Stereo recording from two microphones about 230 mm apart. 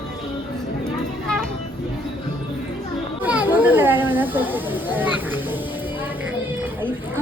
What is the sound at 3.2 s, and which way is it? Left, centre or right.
Speech, centre.